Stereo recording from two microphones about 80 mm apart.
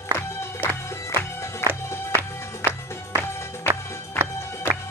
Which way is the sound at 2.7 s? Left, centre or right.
Left.